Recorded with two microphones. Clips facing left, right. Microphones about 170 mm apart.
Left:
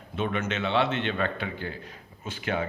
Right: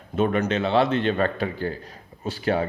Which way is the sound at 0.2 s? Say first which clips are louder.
Right 7 dB; 40° right (ahead or behind).